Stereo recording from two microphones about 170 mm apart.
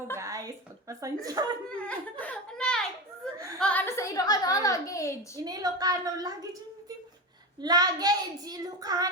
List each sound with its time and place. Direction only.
0.2 s a woman's voice: 20° right (ahead or behind)
1.7 s a sound: 10° left (ahead or behind)
3.6 s a child's voice: 10° left (ahead or behind)
5.4 s a woman's voice: 20° right (ahead or behind)